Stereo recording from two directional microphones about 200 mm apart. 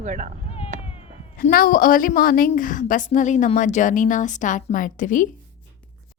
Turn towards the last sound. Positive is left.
turn(degrees=40)  # may be behind; listen again after turning